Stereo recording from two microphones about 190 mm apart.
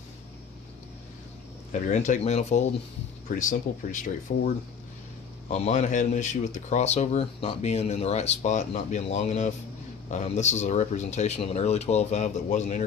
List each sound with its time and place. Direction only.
1.9 s speech: 40° left (ahead or behind)